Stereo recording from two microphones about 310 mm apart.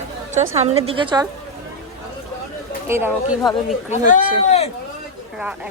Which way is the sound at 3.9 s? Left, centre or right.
Left.